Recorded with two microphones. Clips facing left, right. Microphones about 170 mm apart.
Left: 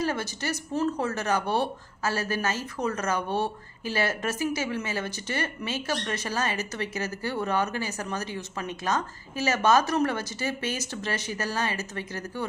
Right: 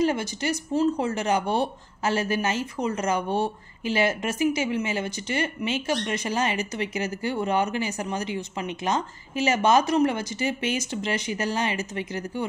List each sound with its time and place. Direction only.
0.0 s speech: 15° right (ahead or behind)